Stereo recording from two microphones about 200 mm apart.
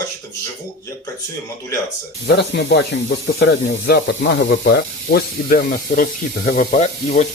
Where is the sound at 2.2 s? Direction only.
60° left (ahead or behind).